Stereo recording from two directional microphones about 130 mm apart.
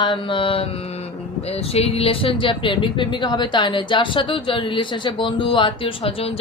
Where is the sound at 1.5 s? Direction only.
50° left (ahead or behind).